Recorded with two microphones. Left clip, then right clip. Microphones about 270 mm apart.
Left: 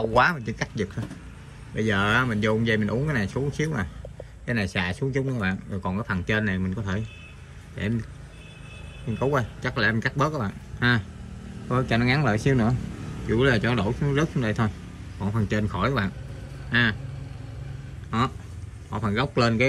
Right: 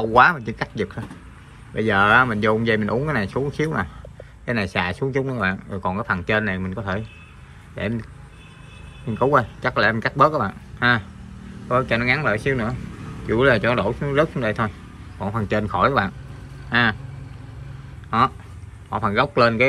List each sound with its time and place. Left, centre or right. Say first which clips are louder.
0.0 s a man's voice: right 6 dB; centre
9.3 s a man's voice: right 9 dB; centre
18.9 s a man's voice: right 7 dB; centre